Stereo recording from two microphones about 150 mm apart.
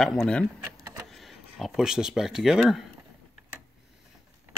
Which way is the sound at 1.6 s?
5° right (ahead or behind).